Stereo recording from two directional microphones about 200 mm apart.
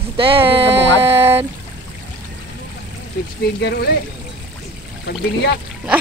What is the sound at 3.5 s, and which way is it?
Speech, 55° left (ahead or behind).